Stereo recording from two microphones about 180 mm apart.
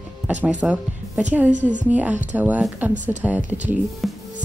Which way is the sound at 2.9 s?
45° right (ahead or behind).